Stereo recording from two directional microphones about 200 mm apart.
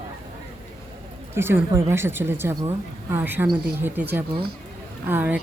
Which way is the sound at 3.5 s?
55° right (ahead or behind).